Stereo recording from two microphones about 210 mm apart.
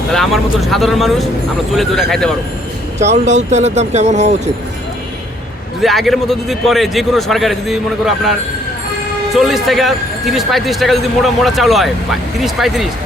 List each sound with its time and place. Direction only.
0.1 s a man's voice: centre (ahead or behind)
3.0 s speech: 35° right (ahead or behind)
5.8 s a man's voice: centre (ahead or behind)